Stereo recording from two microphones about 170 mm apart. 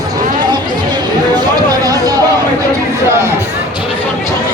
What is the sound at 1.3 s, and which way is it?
Music, 25° right (ahead or behind).